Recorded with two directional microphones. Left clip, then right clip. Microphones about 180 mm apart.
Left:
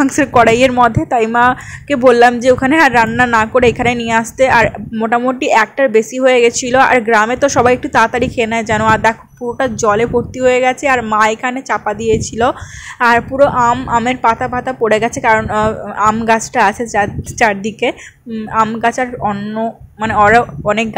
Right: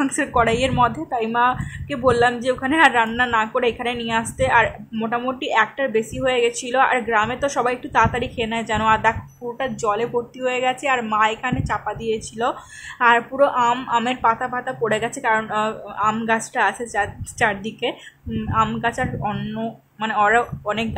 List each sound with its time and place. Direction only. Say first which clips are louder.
0.0 s a woman's voice: left 9 dB; 30° left (ahead or behind)